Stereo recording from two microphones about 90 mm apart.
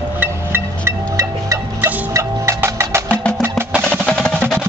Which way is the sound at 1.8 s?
30° right (ahead or behind).